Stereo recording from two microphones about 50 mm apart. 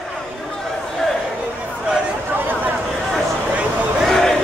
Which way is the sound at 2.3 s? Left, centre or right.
Right.